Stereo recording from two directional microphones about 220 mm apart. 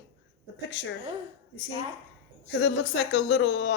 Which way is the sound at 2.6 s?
55° left (ahead or behind).